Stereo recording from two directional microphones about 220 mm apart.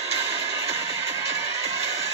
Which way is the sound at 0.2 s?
25° right (ahead or behind).